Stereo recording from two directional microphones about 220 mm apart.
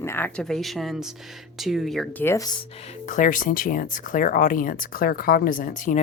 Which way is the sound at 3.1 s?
35° left (ahead or behind).